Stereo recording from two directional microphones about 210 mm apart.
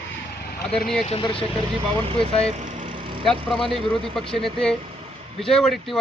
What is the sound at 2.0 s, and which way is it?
Speech, 25° right (ahead or behind).